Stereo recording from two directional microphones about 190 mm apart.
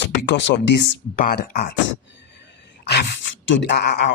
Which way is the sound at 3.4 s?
70° left (ahead or behind).